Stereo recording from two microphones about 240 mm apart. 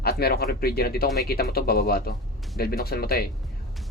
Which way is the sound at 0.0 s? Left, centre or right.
Left.